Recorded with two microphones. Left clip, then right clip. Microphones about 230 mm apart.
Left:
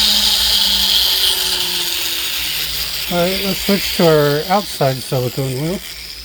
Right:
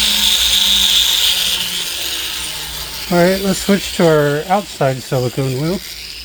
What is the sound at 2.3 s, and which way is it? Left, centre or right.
Ratchet, left.